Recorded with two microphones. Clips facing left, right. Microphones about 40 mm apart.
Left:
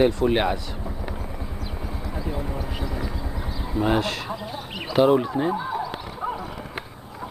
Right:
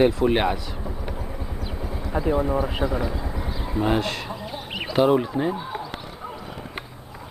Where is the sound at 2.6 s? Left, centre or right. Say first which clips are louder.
Right 6 dB; centre.